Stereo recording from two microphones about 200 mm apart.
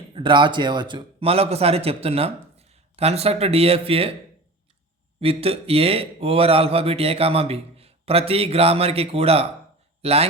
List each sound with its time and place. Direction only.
0.1 s a man's voice: 25° right (ahead or behind)
5.2 s speech: 30° right (ahead or behind)